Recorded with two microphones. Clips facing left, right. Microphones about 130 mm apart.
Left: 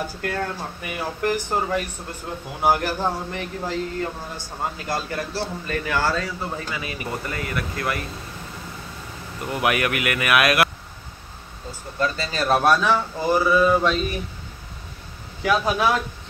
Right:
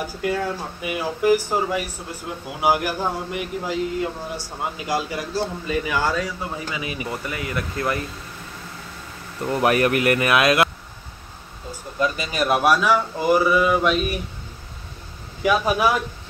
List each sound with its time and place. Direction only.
0.2 s speech: 5° right (ahead or behind)
7.5 s speech: 25° right (ahead or behind)
9.4 s speech: 35° right (ahead or behind)
12.0 s speech: 15° right (ahead or behind)
15.4 s speech: 10° right (ahead or behind)